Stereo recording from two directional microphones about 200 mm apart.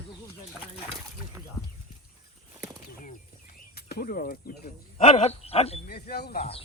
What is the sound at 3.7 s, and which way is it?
Speech, 50° left (ahead or behind).